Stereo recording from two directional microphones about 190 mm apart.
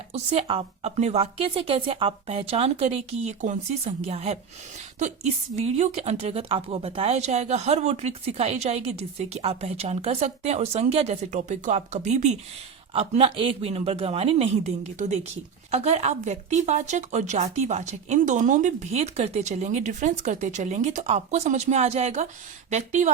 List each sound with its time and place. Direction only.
0.1 s speech: 30° right (ahead or behind)
5.5 s speech: 35° right (ahead or behind)